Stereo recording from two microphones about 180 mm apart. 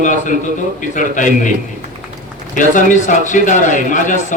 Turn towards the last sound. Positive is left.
turn(degrees=45)  # may be behind; listen again after turning